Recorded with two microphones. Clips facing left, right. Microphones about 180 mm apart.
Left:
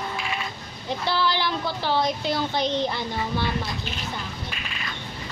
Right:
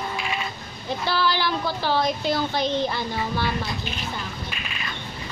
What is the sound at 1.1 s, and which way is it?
Speech, 20° left (ahead or behind).